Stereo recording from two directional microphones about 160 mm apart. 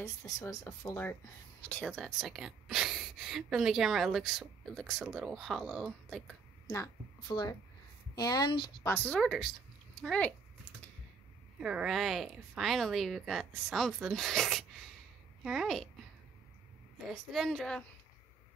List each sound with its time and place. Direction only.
0.0 s speech: 20° left (ahead or behind)
1.7 s speech: 5° left (ahead or behind)
6.8 s speech: 25° left (ahead or behind)
8.8 s speech: 10° left (ahead or behind)
11.6 s speech: 5° right (ahead or behind)
17.1 s speech: centre (ahead or behind)